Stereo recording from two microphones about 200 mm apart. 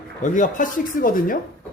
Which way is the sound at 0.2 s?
40° left (ahead or behind).